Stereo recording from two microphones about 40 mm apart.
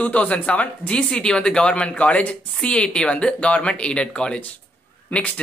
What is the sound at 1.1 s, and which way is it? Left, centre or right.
Speech, centre.